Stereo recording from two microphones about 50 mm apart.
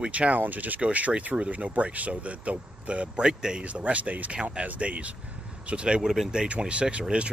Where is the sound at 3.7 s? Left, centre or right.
Right.